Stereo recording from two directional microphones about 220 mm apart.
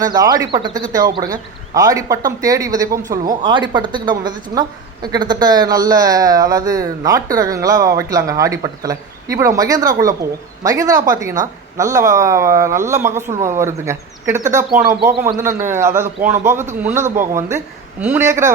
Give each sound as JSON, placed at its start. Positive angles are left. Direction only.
{"t": 0.0, "sound": "speech", "side_deg": -15}